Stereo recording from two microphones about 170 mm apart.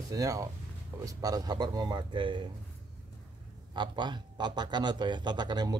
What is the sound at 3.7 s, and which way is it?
Speech, 25° right (ahead or behind).